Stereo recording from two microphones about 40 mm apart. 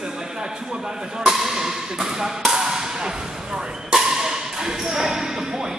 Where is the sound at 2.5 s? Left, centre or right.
Centre.